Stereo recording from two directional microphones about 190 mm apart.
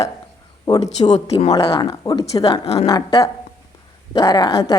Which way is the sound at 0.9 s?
35° left (ahead or behind).